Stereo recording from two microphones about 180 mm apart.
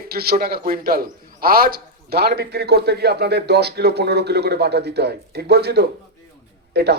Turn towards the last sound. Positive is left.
turn(degrees=-65)  # may be behind; listen again after turning